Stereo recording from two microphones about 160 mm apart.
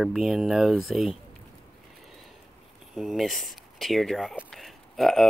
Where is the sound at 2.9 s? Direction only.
Centre (ahead or behind).